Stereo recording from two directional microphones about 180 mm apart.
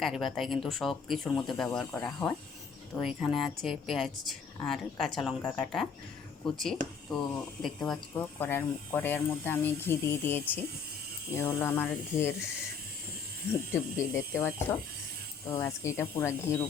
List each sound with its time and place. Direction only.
0.0 s speech: centre (ahead or behind)
13.7 s speech: 15° left (ahead or behind)